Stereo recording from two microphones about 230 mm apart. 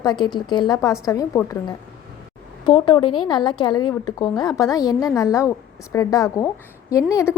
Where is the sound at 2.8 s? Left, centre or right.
Left.